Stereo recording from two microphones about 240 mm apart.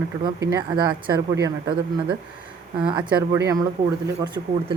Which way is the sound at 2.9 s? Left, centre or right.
Centre.